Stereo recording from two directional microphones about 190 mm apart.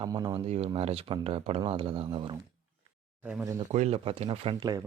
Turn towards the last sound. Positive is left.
turn(degrees=-20)  # may be behind; listen again after turning